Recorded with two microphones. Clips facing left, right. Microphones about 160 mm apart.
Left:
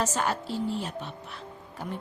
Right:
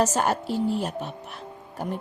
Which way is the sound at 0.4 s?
10° right (ahead or behind).